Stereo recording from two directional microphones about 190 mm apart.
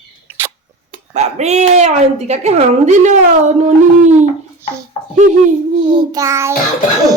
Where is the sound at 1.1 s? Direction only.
35° right (ahead or behind).